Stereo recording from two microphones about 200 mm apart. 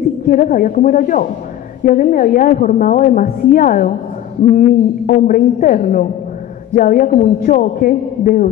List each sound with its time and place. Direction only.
0.3 s a woman's voice: 40° left (ahead or behind)